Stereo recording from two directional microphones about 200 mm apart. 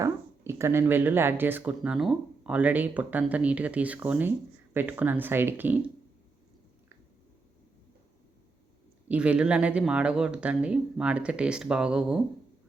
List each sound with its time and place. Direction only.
0.0 s speech: 15° right (ahead or behind)
9.0 s speech: 5° right (ahead or behind)